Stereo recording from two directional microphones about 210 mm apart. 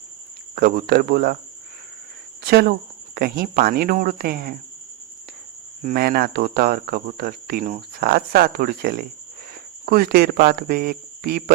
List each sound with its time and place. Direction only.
0.5 s cricket: 45° right (ahead or behind)
2.5 s cricket: 50° right (ahead or behind)
5.8 s cricket: 45° right (ahead or behind)